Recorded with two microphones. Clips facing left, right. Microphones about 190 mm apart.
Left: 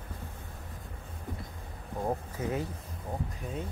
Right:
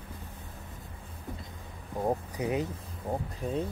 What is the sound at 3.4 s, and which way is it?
Speech, 30° right (ahead or behind).